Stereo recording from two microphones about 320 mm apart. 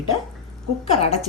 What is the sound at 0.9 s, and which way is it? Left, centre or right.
Speech, centre.